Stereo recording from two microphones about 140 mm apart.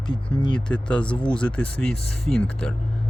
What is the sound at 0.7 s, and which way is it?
A man's voice, 5° left (ahead or behind).